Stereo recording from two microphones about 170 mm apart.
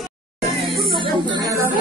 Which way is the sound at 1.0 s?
30° right (ahead or behind).